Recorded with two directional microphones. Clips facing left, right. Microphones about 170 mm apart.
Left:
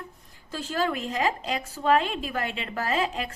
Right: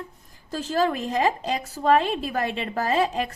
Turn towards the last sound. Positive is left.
turn(degrees=-35)  # may be behind; listen again after turning